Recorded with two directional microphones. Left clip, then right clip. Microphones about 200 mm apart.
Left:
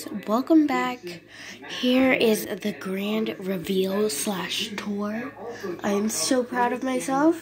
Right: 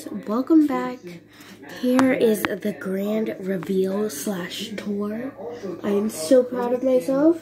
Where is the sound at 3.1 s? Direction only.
60° left (ahead or behind).